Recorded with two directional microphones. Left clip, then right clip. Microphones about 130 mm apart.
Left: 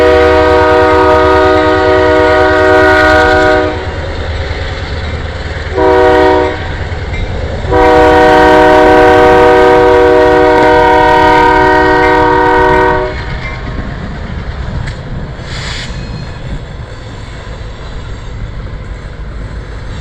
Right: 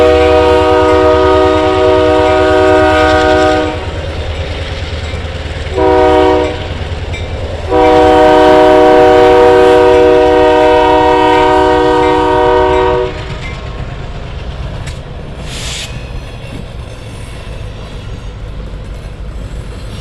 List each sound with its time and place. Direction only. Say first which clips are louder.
0.0 s train: left 1 dB; 20° right (ahead or behind)
5.7 s train: left 1 dB; 15° right (ahead or behind)
7.7 s train: left 1 dB; 15° right (ahead or behind)
15.6 s a sound: even; 25° right (ahead or behind)